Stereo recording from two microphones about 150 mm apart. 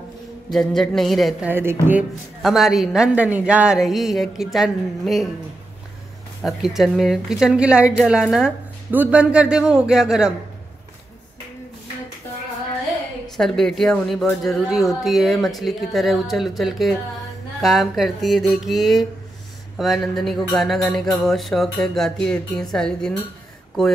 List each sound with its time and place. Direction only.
0.5 s speech: centre (ahead or behind)
1.5 s speech: 15° right (ahead or behind)
2.4 s speech: centre (ahead or behind)
6.4 s speech: centre (ahead or behind)
13.4 s speech: 5° left (ahead or behind)